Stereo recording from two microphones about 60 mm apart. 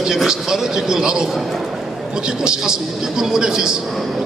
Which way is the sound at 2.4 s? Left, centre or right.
Centre.